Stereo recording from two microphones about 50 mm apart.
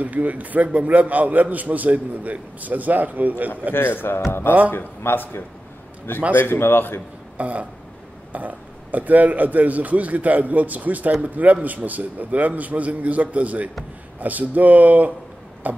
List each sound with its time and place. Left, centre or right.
0.0 s speech: right
3.7 s speech: left
7.3 s speech: right